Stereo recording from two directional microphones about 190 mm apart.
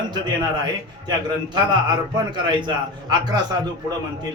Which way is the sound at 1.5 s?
25° right (ahead or behind).